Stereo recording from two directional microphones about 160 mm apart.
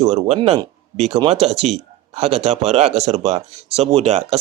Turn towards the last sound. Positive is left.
turn(degrees=-40)  # may be behind; listen again after turning